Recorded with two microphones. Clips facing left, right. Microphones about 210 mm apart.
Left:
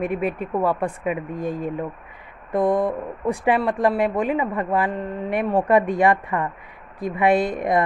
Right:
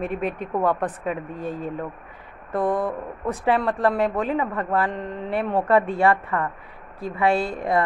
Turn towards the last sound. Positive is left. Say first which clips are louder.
# left 3 dB
turn(degrees=20)  # may be behind; listen again after turning